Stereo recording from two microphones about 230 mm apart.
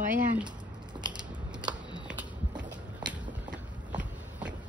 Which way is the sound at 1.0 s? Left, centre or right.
Centre.